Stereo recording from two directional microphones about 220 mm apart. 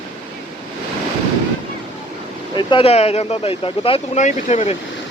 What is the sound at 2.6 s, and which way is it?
Speech, 20° left (ahead or behind).